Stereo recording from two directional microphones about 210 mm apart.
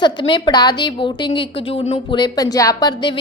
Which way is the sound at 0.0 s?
20° left (ahead or behind).